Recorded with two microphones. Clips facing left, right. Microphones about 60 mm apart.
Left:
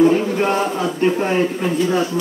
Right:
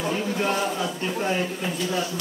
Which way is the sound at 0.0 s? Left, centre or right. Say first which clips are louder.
Left 11 dB; left.